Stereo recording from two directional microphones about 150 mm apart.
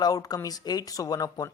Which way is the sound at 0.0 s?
25° left (ahead or behind).